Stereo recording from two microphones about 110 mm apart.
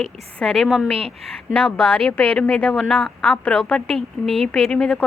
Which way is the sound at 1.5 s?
10° left (ahead or behind).